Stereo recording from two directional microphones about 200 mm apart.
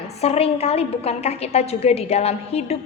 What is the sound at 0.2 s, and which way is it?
A woman's voice, 30° left (ahead or behind).